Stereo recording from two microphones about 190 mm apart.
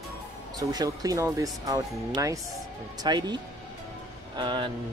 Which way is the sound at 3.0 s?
20° right (ahead or behind).